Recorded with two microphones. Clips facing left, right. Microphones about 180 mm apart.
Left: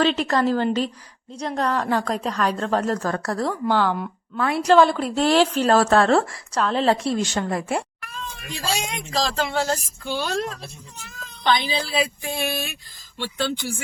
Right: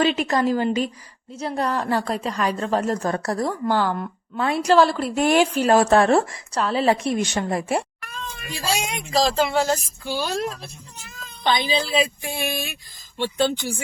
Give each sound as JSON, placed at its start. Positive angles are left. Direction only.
{"t": 0.0, "sound": "a woman's voice", "side_deg": -10}
{"t": 4.4, "sound": "speech", "side_deg": -25}
{"t": 4.6, "sound": "a woman's voice", "side_deg": -5}
{"t": 5.1, "sound": "a woman's voice", "side_deg": -15}
{"t": 7.0, "sound": "a woman's voice", "side_deg": -20}
{"t": 11.4, "sound": "a woman's voice", "side_deg": -20}